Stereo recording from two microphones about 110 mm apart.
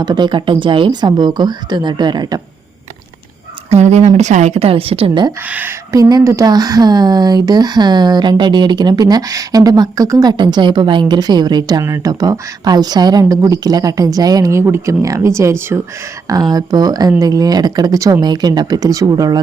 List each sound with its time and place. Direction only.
0.0 s speech: 40° right (ahead or behind)
3.7 s a woman's voice: 90° right; by 5.2 s 55° right (ahead or behind)
5.5 s speech: 15° right (ahead or behind)
5.9 s speech: 35° right (ahead or behind)
16.3 s speech: 35° right (ahead or behind)